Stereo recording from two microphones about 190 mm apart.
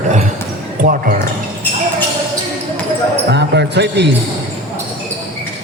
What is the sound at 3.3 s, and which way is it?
Speech, 60° right (ahead or behind).